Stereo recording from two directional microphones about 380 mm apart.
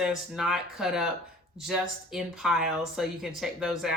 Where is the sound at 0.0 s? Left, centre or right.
Centre.